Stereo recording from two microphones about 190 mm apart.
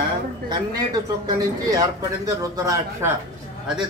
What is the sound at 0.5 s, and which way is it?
Speech, 20° right (ahead or behind).